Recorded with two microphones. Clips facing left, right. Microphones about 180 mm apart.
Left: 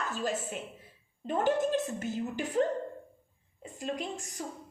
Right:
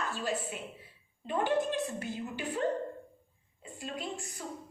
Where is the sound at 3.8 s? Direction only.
45° left (ahead or behind).